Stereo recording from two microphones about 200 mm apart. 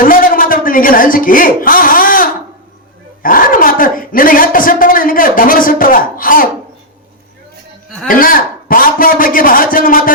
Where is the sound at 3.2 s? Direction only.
45° left (ahead or behind).